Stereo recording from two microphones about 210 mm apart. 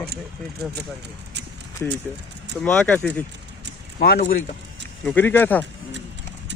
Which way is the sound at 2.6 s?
5° left (ahead or behind).